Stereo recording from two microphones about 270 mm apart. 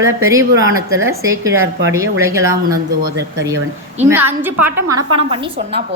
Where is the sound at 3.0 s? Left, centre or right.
Right.